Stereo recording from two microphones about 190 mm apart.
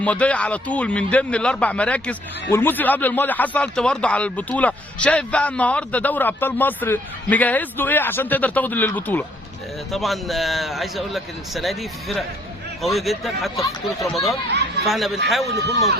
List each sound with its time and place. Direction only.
0.0 s a man's voice: 5° left (ahead or behind)
15.5 s a man's voice: 15° left (ahead or behind)